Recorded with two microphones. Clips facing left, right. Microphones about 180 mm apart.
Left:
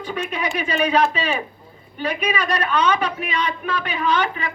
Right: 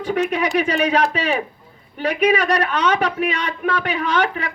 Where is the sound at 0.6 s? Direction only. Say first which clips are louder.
Even; 75° right (ahead or behind).